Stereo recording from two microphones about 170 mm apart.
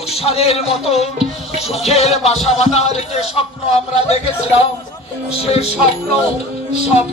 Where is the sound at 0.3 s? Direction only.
35° left (ahead or behind).